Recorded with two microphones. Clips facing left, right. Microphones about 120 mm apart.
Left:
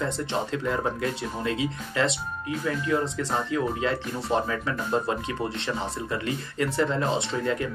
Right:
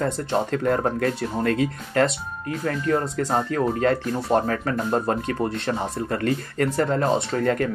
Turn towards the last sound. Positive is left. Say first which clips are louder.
# right 5 dB
turn(degrees=-55)  # may be behind; listen again after turning